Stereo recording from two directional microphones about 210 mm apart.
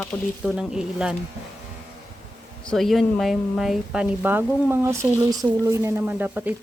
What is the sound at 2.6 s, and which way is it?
Speech, centre (ahead or behind).